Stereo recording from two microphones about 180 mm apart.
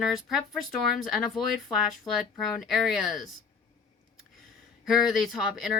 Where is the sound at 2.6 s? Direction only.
Centre (ahead or behind).